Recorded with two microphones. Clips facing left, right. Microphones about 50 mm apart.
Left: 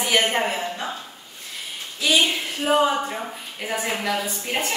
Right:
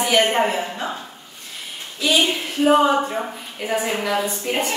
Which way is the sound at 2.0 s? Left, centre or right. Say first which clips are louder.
Right 1 dB; centre.